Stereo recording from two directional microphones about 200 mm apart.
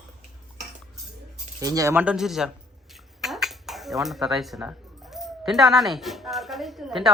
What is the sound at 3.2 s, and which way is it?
Dishes, centre (ahead or behind).